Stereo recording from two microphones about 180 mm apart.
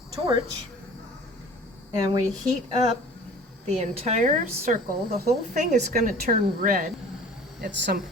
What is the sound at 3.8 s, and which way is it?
A woman's voice, 40° right (ahead or behind).